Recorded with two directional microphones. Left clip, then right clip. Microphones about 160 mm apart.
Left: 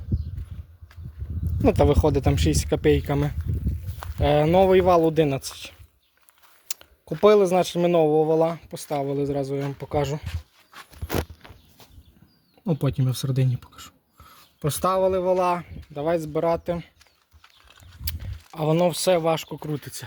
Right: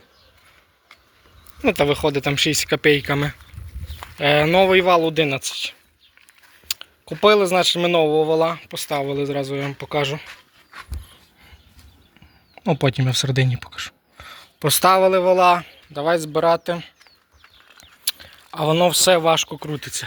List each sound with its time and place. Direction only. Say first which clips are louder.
1.6 s speech: right 2 dB; 30° left (ahead or behind)
6.7 s a sound: right 9 dB; 30° left (ahead or behind)
7.2 s speech: right 2 dB; 30° left (ahead or behind)
12.6 s speech: right 7 dB; 5° right (ahead or behind)
18.0 s a sound: right 11 dB; 20° left (ahead or behind)
18.6 s speech: right 5 dB; 5° left (ahead or behind)